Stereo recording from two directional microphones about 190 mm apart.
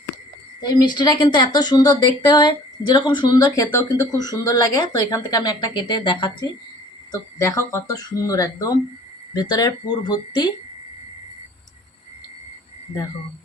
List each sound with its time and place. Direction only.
0.6 s speech: 20° left (ahead or behind)